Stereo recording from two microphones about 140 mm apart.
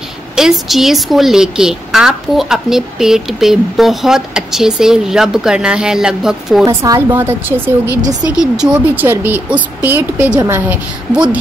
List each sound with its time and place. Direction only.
0.4 s a woman's voice: centre (ahead or behind)
6.6 s speech: 25° right (ahead or behind)
8.2 s speech: 5° right (ahead or behind)